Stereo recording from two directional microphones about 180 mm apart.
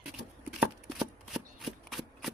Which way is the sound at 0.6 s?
5° right (ahead or behind).